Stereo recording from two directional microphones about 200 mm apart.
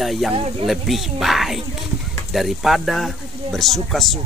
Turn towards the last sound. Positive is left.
turn(degrees=0)  # may be behind; listen again after turning